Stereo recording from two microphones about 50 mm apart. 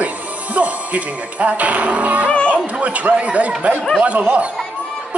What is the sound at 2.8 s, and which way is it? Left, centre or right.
Speech, right.